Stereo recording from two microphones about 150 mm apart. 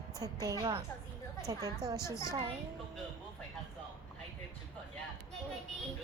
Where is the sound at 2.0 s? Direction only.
20° left (ahead or behind).